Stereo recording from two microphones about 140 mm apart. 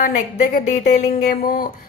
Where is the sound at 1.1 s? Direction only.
90° left.